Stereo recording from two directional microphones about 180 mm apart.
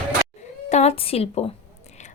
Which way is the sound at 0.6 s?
40° left (ahead or behind).